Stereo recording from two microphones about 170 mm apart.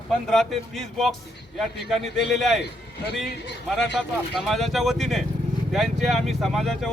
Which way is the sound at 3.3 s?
90° left.